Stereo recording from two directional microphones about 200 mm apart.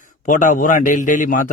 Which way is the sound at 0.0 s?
40° left (ahead or behind).